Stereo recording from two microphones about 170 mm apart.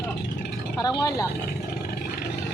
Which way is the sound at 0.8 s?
20° left (ahead or behind).